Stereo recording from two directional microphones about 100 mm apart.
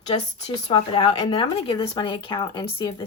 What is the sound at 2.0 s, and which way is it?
Speech, 45° left (ahead or behind).